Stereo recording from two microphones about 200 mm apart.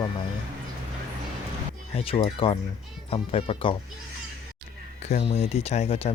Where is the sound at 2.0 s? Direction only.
30° left (ahead or behind).